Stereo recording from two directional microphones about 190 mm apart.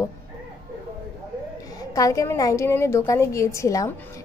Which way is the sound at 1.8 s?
20° left (ahead or behind).